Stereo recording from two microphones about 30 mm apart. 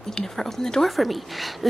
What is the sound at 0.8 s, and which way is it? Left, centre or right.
Speech, centre.